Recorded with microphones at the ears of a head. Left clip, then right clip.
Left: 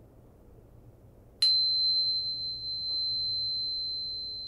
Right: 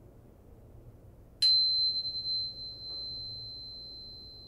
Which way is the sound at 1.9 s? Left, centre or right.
Left.